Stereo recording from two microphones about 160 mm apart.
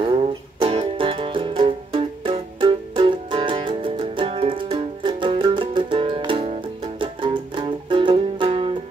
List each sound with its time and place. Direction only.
0.0 s music: 35° right (ahead or behind)